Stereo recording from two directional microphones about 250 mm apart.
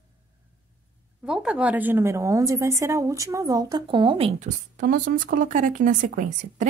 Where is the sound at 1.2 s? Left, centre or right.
Centre; by 6.7 s right.